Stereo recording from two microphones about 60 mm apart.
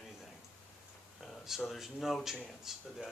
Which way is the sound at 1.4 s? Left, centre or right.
Centre.